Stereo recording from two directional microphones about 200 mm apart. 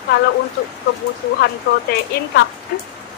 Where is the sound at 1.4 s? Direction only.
55° left (ahead or behind).